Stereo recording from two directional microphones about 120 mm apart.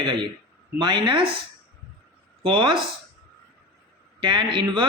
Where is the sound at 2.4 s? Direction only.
45° right (ahead or behind).